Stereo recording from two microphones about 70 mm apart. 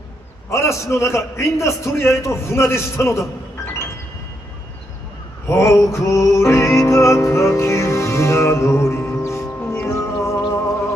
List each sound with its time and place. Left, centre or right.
0.5 s a man's voice: left
5.5 s a sound: left
6.0 s music: left